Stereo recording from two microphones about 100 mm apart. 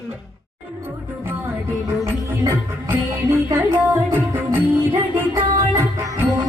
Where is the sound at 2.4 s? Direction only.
25° right (ahead or behind).